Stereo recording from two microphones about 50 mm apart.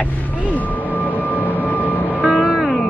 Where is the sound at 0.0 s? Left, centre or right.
Left.